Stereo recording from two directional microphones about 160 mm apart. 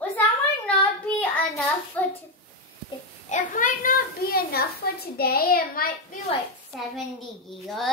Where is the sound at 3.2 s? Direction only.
55° left (ahead or behind).